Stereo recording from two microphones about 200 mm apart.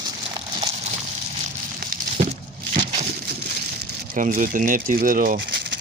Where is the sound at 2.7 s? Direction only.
35° right (ahead or behind).